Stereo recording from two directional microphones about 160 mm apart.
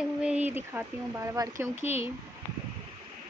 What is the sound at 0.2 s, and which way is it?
Speech, 10° right (ahead or behind).